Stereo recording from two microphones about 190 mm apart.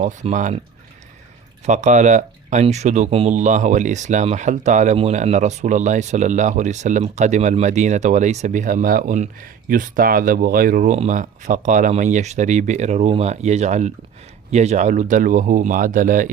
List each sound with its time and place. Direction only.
0.0 s speech: 40° right (ahead or behind)
1.6 s speech: 40° right (ahead or behind)